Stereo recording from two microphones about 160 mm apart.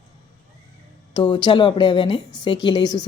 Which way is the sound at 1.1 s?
30° left (ahead or behind).